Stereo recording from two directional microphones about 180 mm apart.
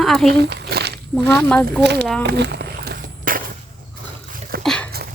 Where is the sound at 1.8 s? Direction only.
70° right (ahead or behind).